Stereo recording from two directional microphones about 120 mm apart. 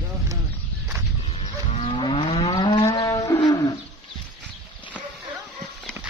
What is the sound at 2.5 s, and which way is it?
Livestock, 35° left (ahead or behind).